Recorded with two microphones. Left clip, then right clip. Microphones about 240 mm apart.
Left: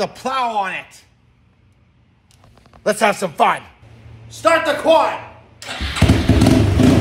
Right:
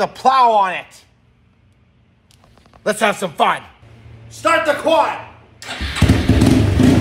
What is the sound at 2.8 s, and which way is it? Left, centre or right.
Speech, centre.